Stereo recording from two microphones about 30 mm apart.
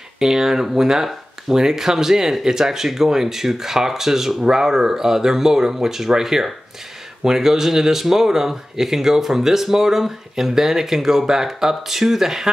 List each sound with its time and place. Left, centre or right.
0.2 s speech: centre